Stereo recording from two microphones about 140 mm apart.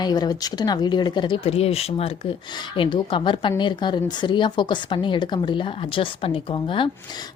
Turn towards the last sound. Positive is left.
turn(degrees=35)  # may be behind; listen again after turning